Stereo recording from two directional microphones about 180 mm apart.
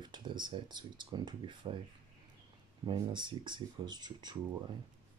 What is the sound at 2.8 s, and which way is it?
Speech, 25° right (ahead or behind).